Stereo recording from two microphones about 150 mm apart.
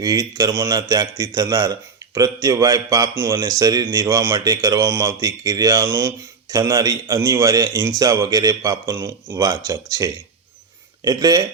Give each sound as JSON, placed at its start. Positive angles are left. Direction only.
{"t": 0.0, "sound": "speech", "side_deg": -25}